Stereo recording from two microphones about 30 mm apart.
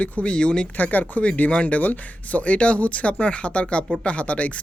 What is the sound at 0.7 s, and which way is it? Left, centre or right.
Speech, left.